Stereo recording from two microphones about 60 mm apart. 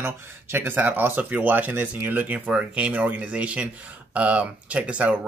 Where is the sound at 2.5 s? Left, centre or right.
Centre.